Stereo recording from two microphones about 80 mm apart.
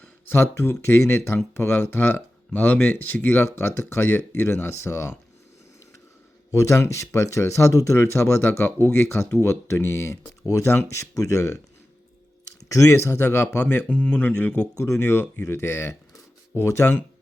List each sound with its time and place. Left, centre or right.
0.0 s speech: left
6.5 s speech: left
12.6 s speech: left
13.9 s speech: centre
14.8 s speech: left